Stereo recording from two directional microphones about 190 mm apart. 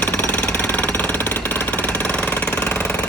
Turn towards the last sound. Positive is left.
turn(degrees=10)  # may be behind; listen again after turning